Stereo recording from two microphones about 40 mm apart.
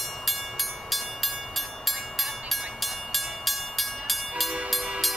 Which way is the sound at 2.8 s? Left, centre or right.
Centre.